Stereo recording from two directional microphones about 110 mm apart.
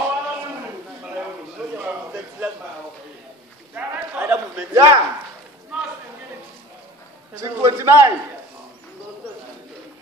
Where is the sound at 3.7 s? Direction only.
15° right (ahead or behind).